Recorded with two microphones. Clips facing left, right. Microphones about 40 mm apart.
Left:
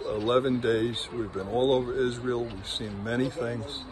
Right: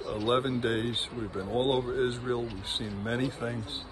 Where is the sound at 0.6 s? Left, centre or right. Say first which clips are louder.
Left 3 dB; right.